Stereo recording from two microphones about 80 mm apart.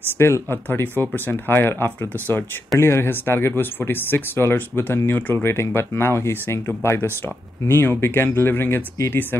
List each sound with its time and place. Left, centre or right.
0.0 s speech: left